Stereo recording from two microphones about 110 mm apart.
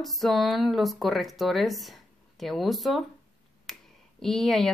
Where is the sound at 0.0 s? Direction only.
Centre (ahead or behind).